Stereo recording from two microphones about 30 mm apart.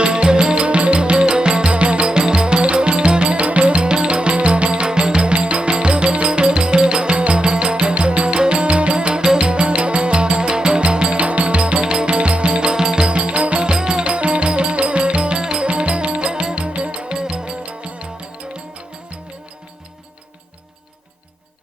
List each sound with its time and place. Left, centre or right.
0.0 s music: right
9.2 s music: right
9.5 s music: right
12.7 s music: right
13.1 s music: right
13.7 s music: right
15.6 s music: right
17.2 s music: right
17.7 s music: right